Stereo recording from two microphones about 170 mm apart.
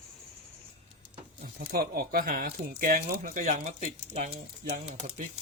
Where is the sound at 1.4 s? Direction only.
60° right (ahead or behind); by 4.4 s 45° right (ahead or behind).